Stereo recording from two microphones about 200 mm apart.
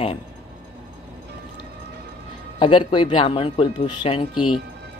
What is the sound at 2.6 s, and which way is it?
Speech, 25° left (ahead or behind).